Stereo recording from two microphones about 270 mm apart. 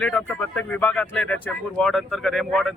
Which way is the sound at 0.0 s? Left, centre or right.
Centre.